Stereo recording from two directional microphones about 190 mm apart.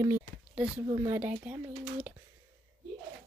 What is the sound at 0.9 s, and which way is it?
Speech, 20° right (ahead or behind).